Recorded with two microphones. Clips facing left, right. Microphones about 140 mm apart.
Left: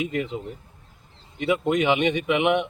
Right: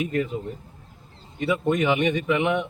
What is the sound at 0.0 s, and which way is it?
A man's voice, 15° left (ahead or behind).